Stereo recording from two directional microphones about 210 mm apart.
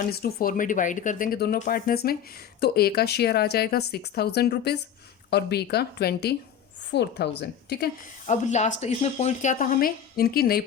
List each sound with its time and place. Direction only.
0.1 s speech: 45° left (ahead or behind)
8.3 s speech: 35° left (ahead or behind)